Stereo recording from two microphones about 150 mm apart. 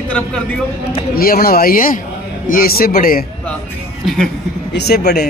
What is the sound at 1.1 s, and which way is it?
Speech, 80° left.